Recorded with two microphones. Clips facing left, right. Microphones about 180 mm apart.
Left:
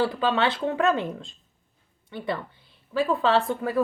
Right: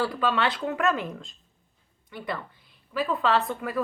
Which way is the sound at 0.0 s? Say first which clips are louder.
Left 2 dB; 25° left (ahead or behind).